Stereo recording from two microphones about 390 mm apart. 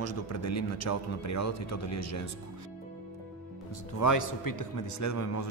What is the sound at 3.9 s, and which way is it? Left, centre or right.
Speech, left.